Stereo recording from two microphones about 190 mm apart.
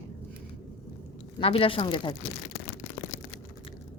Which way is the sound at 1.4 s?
30° left (ahead or behind).